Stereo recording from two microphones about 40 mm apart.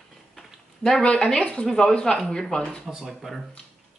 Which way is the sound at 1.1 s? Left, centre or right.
Centre.